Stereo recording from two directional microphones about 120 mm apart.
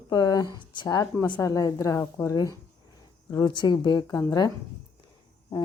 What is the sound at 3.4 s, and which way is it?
Speech, 40° left (ahead or behind).